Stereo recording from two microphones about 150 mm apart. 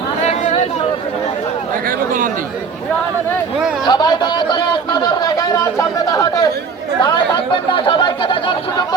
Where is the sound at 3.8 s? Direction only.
30° left (ahead or behind).